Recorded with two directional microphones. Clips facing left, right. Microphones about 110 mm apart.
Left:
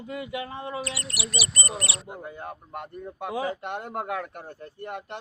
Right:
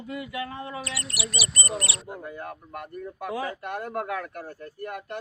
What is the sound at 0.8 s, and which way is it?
Speech, centre (ahead or behind).